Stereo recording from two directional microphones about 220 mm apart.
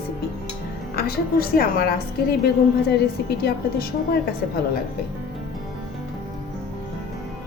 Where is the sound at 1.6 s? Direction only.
40° left (ahead or behind).